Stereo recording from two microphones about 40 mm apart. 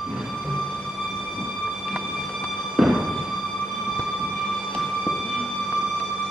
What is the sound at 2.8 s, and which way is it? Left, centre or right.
Music, centre.